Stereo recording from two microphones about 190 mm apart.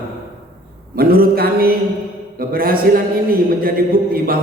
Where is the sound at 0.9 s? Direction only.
50° right (ahead or behind).